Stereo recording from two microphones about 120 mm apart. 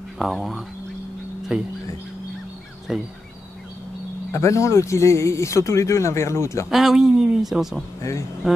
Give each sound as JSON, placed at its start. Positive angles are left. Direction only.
{"t": 0.2, "sound": "speech", "side_deg": 0}
{"t": 2.9, "sound": "speech", "side_deg": -5}
{"t": 4.3, "sound": "speech", "side_deg": 25}
{"t": 6.7, "sound": "speech", "side_deg": 0}
{"t": 8.4, "sound": "a sound", "side_deg": 0}